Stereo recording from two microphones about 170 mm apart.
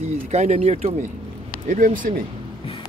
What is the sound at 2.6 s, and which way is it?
Music, 30° left (ahead or behind).